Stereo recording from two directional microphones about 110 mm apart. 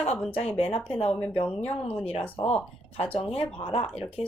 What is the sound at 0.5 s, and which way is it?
Speech, 65° left (ahead or behind).